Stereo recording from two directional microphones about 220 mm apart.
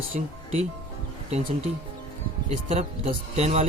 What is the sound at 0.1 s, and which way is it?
Speech, 35° right (ahead or behind).